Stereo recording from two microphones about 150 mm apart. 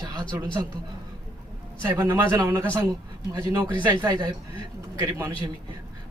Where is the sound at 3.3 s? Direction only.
25° right (ahead or behind).